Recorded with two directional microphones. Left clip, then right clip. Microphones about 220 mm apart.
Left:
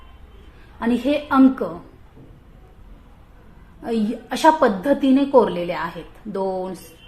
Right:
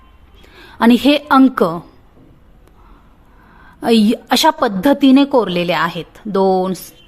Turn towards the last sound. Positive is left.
turn(degrees=-35)  # may be behind; listen again after turning